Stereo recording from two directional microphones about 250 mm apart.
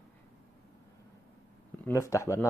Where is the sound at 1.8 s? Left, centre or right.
Centre.